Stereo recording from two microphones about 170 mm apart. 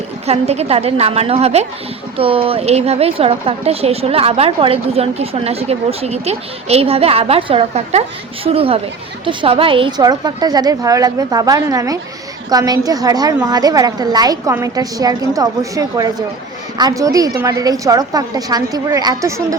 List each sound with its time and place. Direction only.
0.3 s a woman's voice: 40° right (ahead or behind); by 19.5 s 20° right (ahead or behind)